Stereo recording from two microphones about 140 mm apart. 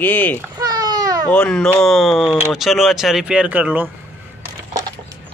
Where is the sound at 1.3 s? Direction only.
10° left (ahead or behind); by 3.9 s 10° right (ahead or behind).